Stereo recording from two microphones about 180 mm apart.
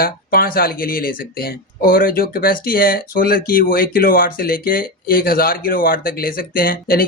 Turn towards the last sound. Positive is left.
turn(degrees=55)  # may be behind; listen again after turning